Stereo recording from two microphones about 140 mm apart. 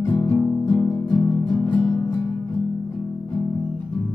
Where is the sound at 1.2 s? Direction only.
30° left (ahead or behind).